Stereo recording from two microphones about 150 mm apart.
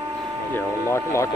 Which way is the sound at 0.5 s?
20° left (ahead or behind).